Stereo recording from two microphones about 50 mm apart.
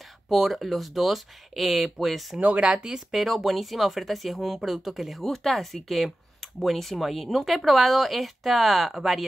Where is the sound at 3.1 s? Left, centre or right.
Centre.